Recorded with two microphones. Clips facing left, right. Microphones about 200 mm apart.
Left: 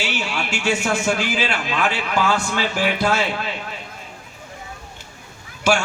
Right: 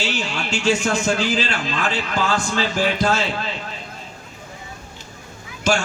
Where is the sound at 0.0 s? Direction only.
10° left (ahead or behind).